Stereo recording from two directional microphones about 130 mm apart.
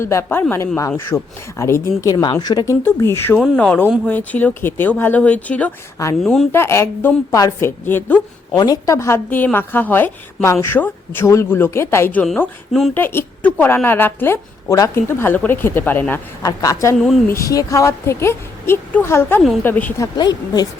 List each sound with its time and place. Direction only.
0.0 s a woman's voice: 20° left (ahead or behind)
2.8 s a woman's voice: 20° left (ahead or behind)
3.3 s speech: 5° right (ahead or behind)
3.6 s a woman's voice: 10° left (ahead or behind)
6.2 s speech: centre (ahead or behind)
6.5 s a woman's voice: 20° left (ahead or behind)
8.5 s a woman's voice: 30° left (ahead or behind)
16.4 s a woman's voice: 25° left (ahead or behind)
20.0 s a woman's voice: 30° left (ahead or behind)